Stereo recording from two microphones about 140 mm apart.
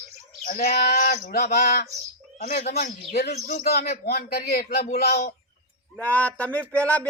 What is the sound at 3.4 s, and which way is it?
A man's voice, 85° left.